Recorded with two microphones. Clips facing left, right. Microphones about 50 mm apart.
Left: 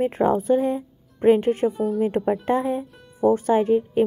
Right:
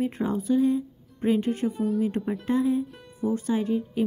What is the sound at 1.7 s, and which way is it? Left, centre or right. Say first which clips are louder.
Speech: left 3 dB; centre.